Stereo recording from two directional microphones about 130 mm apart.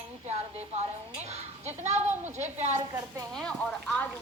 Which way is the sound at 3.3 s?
5° left (ahead or behind).